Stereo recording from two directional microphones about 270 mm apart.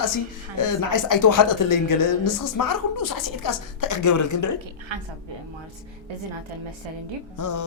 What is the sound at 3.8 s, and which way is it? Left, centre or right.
Speech, left.